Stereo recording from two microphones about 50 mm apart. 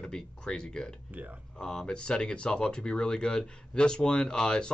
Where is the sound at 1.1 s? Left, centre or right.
Right.